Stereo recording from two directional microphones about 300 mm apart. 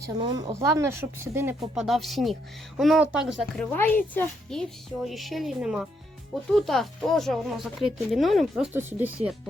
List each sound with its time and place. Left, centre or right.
0.2 s a woman's voice: centre